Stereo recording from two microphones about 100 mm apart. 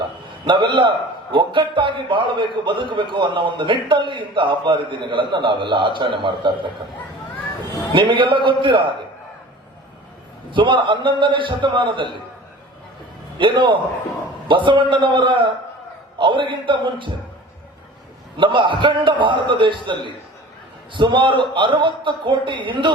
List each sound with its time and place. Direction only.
0.4 s a man's voice: 55° right (ahead or behind)
7.9 s a man's voice: 55° right (ahead or behind)
10.5 s a man's voice: 55° right (ahead or behind)
13.4 s a man's voice: 55° right (ahead or behind)
18.3 s a man's voice: 55° right (ahead or behind)